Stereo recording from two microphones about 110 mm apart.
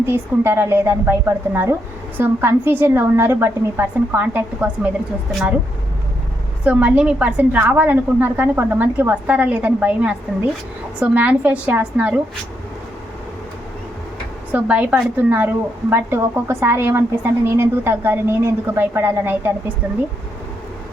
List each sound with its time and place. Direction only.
0.0 s a woman's voice: 20° right (ahead or behind)
6.7 s a woman's voice: 10° right (ahead or behind)
14.5 s a woman's voice: 10° right (ahead or behind)